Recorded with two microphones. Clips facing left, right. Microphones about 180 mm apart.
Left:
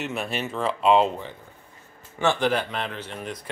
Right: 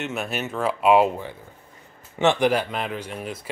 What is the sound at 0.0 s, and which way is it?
A man's voice, centre (ahead or behind).